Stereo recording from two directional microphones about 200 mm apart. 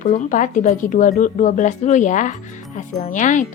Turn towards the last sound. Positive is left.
turn(degrees=40)  # may be behind; listen again after turning